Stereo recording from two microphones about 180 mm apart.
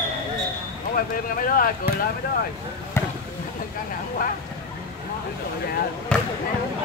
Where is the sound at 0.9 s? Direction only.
50° left (ahead or behind).